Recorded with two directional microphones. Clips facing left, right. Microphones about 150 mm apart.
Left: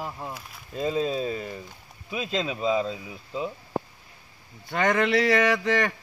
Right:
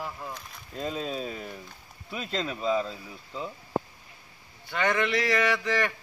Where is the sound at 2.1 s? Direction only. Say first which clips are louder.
Left 3 dB; 15° left (ahead or behind).